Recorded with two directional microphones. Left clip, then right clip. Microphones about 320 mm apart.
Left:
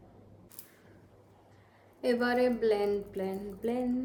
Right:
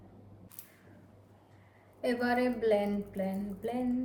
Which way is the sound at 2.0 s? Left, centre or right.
Centre.